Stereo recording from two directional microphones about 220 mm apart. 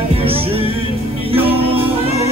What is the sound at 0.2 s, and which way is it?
Music, 25° right (ahead or behind).